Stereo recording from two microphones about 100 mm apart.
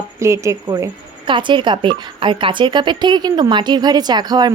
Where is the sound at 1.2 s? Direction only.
55° right (ahead or behind).